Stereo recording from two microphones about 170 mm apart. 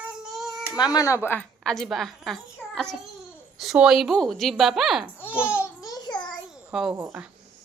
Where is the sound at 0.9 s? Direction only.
20° left (ahead or behind); by 5.5 s 10° right (ahead or behind).